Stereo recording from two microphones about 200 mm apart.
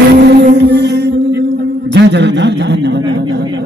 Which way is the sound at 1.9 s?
60° right (ahead or behind).